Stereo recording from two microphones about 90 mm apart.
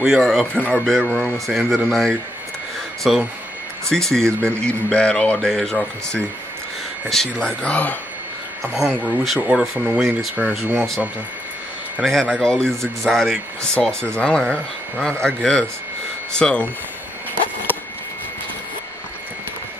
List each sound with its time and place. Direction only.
0.0 s speech: 5° right (ahead or behind)
0.6 s speech: 15° left (ahead or behind)
8.6 s speech: 30° right (ahead or behind)
9.0 s speech: centre (ahead or behind)
10.4 s speech: 15° right (ahead or behind)
12.0 s speech: 5° left (ahead or behind)
14.1 s speech: 10° left (ahead or behind)